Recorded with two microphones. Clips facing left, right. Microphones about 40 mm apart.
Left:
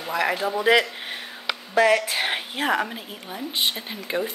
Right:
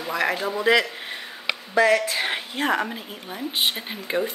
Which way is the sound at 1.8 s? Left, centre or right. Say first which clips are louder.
Even; centre.